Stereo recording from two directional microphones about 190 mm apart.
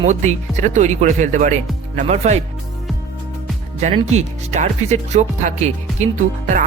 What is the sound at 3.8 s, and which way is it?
Speech, 30° right (ahead or behind).